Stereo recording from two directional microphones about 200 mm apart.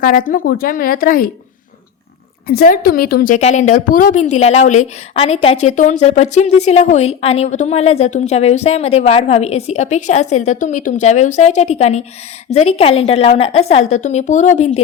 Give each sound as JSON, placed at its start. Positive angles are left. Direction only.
{"t": 0.0, "sound": "a woman's voice", "side_deg": 45}
{"t": 2.5, "sound": "a woman's voice", "side_deg": 50}